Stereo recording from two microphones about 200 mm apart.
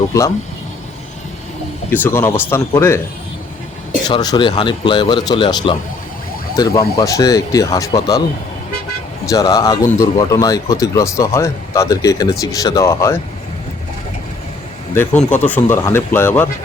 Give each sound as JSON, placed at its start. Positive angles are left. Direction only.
{"t": 1.9, "sound": "speech", "side_deg": 10}
{"t": 4.1, "sound": "speech", "side_deg": 20}
{"t": 9.3, "sound": "speech", "side_deg": 20}
{"t": 14.9, "sound": "speech", "side_deg": 10}